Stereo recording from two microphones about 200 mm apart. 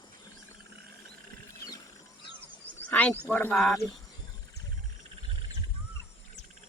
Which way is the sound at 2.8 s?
5° left (ahead or behind).